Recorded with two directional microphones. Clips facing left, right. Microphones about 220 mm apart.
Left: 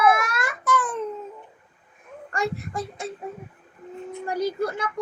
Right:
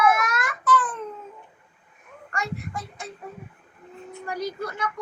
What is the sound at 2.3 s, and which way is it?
Speech, 35° left (ahead or behind).